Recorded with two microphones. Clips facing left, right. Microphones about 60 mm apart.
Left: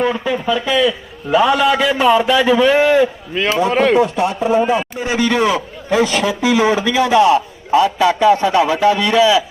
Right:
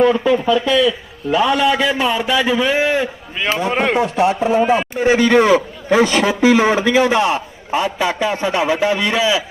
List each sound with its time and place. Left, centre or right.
0.0 s a man's voice: centre
3.9 s a man's voice: right
4.6 s a man's voice: right